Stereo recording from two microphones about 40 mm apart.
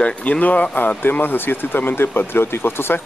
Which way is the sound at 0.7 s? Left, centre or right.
Left.